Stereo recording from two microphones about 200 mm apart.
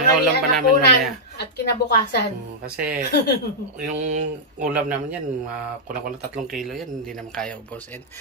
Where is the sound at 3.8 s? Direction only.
35° right (ahead or behind).